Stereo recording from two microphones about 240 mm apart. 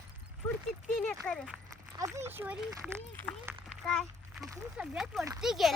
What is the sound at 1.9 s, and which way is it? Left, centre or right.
Speech, centre.